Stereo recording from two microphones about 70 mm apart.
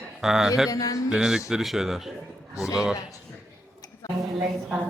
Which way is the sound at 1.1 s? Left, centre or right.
Centre.